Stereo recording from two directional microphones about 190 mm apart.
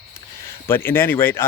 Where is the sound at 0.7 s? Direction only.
10° left (ahead or behind).